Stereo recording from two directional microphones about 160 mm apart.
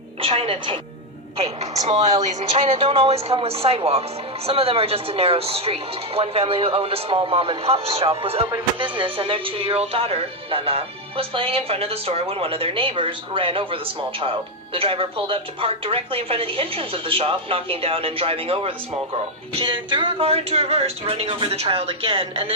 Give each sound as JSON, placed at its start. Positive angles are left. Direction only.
{"t": 0.2, "sound": "speech", "side_deg": -35}
{"t": 2.2, "sound": "speech", "side_deg": -35}